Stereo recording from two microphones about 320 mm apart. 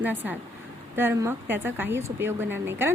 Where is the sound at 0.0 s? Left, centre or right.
Centre.